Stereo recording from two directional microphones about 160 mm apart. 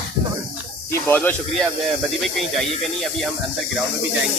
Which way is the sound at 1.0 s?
10° left (ahead or behind).